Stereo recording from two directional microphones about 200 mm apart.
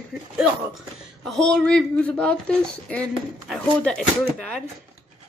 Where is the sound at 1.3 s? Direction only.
5° left (ahead or behind).